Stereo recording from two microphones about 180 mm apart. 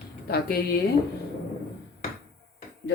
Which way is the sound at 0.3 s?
60° left (ahead or behind).